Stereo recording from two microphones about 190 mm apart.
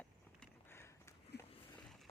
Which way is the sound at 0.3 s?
10° left (ahead or behind).